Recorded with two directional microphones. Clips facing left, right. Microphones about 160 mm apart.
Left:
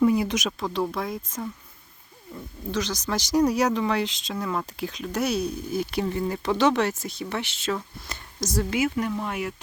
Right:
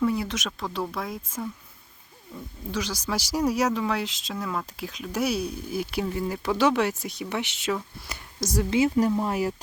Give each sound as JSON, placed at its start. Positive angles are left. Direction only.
{"t": 0.0, "sound": "speech", "side_deg": 15}
{"t": 0.6, "sound": "speech", "side_deg": 0}
{"t": 8.7, "sound": "speech", "side_deg": -30}